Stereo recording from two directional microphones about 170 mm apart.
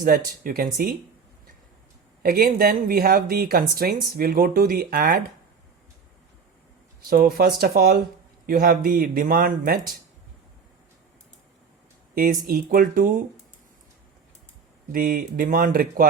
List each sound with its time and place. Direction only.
0.0 s speech: 55° right (ahead or behind)
2.2 s speech: 60° right (ahead or behind)
7.0 s speech: 60° right (ahead or behind)
12.1 s speech: 55° right (ahead or behind)
14.9 s speech: 55° right (ahead or behind)